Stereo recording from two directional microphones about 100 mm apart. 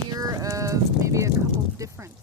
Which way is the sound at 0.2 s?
35° right (ahead or behind).